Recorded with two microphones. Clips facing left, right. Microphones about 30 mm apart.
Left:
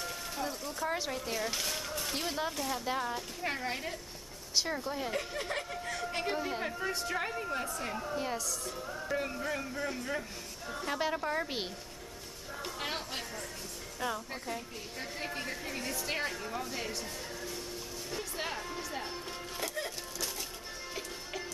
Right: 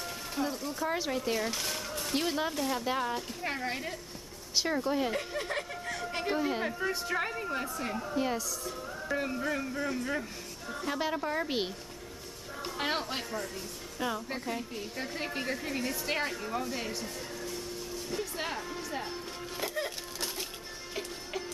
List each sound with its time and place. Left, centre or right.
0.0 s speech: centre
1.5 s a sound: centre
2.1 s a woman's voice: centre
5.1 s a woman's voice: centre
12.6 s a woman's voice: centre
18.1 s music: centre
20.9 s music: centre